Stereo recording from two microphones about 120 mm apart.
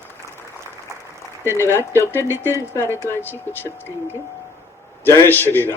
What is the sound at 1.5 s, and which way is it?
A man's voice, 20° left (ahead or behind).